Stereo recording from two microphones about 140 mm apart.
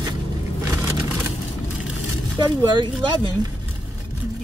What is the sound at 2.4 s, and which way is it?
Speech, 30° right (ahead or behind).